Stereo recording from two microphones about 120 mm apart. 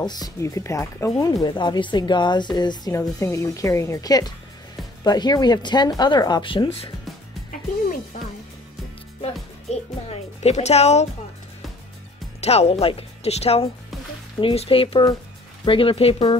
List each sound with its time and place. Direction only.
0.0 s a woman's voice: 35° left (ahead or behind)
1.4 s speech: 35° left (ahead or behind)
2.9 s a woman's voice: 25° left (ahead or behind); by 6.9 s 50° left (ahead or behind)
8.1 s speech: 90° left
9.2 s speech: 60° left (ahead or behind)
12.4 s speech: 60° left (ahead or behind)